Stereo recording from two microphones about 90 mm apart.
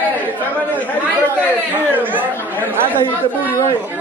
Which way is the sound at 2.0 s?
20° right (ahead or behind).